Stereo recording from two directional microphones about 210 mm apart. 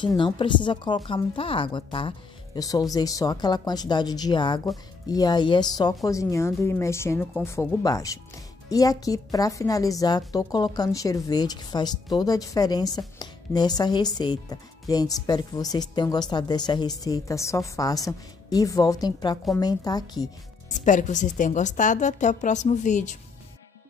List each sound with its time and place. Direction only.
0.0 s a woman's voice: 20° left (ahead or behind)
20.8 s a woman's voice: 35° left (ahead or behind)